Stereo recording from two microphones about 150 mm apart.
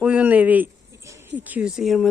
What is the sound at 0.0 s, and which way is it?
Speech, 10° right (ahead or behind).